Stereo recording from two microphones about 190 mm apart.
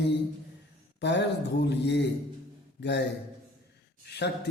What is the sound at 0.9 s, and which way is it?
Speech, 65° left (ahead or behind).